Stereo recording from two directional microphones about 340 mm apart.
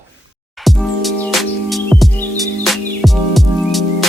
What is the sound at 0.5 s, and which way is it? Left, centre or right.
Music, centre.